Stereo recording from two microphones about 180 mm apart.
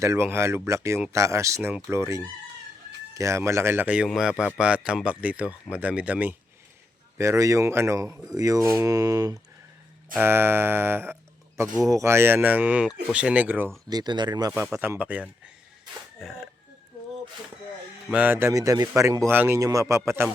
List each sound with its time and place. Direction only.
0.0 s a man's voice: 15° right (ahead or behind)
13.9 s speech: 25° right (ahead or behind)
14.7 s a man's voice: 10° right (ahead or behind)
18.1 s a man's voice: 10° right (ahead or behind)